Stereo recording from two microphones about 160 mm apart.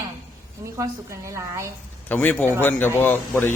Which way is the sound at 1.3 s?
20° right (ahead or behind).